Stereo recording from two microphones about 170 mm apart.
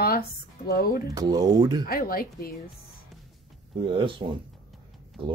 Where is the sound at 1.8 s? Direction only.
60° left (ahead or behind).